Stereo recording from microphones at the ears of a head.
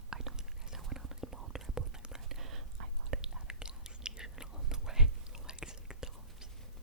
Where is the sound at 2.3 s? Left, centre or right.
Right.